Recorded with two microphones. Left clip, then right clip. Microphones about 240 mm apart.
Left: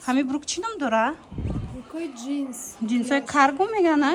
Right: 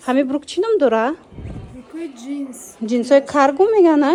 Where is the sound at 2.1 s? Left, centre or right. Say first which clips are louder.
Right 1 dB; centre.